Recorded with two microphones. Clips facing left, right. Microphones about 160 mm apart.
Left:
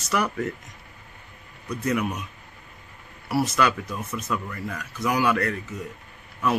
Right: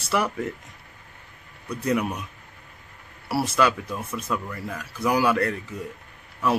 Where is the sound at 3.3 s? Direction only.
30° right (ahead or behind).